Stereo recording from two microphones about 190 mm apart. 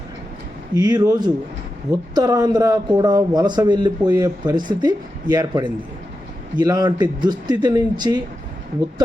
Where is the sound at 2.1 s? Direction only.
20° right (ahead or behind).